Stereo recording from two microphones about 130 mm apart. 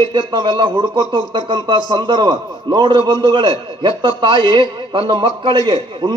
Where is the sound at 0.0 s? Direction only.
40° right (ahead or behind).